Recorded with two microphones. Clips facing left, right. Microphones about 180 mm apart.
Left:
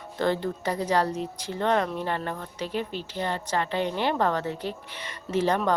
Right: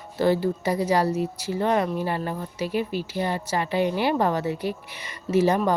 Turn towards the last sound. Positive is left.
turn(degrees=-10)  # may be behind; listen again after turning